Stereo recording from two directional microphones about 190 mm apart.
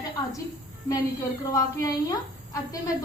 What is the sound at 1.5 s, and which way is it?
A woman's voice, 20° left (ahead or behind).